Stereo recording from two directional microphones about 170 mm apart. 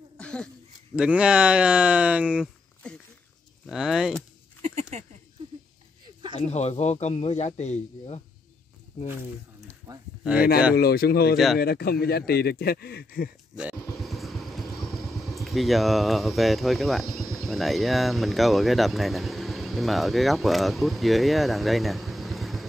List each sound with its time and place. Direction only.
0.2 s a sound: 5° left (ahead or behind)
0.9 s speech: 5° right (ahead or behind)
3.6 s speech: centre (ahead or behind)
4.6 s a sound: 40° right (ahead or behind)
6.3 s a man's voice: 40° left (ahead or behind)
10.8 s speech: 65° left (ahead or behind)
11.3 s speech: centre (ahead or behind)
11.6 s speech: 65° left (ahead or behind)
14.0 s vehicle: centre (ahead or behind)
15.3 s speech: centre (ahead or behind)